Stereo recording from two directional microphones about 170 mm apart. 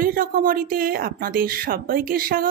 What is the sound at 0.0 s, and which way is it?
Speech, 55° right (ahead or behind).